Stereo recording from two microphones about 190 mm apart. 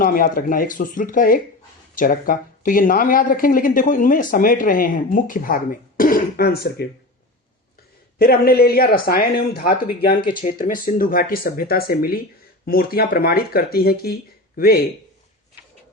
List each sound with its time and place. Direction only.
0.0 s a man's voice: 50° left (ahead or behind)
6.0 s throat clearing: 50° left (ahead or behind)
8.2 s a man's voice: 55° left (ahead or behind)